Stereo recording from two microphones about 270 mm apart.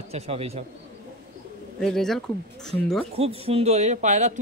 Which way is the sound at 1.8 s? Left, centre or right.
Centre.